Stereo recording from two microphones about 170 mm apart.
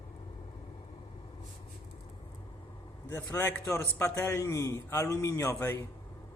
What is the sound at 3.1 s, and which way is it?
A man's voice, 10° left (ahead or behind).